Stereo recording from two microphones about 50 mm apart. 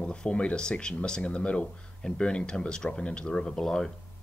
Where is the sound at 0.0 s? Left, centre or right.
Centre.